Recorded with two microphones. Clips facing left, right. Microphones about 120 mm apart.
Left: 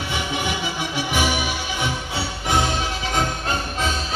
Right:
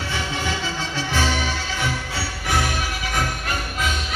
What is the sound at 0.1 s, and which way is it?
Music, 15° left (ahead or behind).